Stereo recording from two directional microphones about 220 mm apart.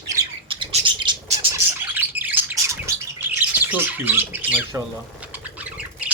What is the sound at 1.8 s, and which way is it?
Bird, 10° right (ahead or behind).